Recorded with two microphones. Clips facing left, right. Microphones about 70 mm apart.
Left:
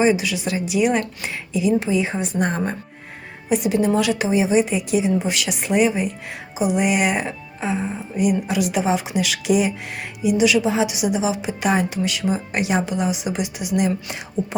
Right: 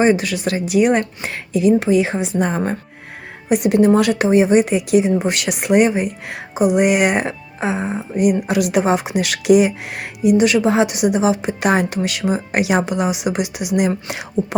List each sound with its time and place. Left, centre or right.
0.0 s a woman's voice: right
3.5 s a woman's voice: right